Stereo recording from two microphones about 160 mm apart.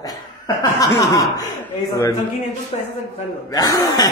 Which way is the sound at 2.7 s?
40° left (ahead or behind).